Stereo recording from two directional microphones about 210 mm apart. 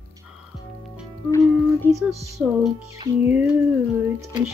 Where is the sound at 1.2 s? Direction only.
15° left (ahead or behind).